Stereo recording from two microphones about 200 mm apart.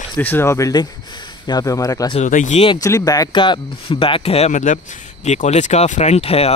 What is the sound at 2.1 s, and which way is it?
Speech, 40° left (ahead or behind).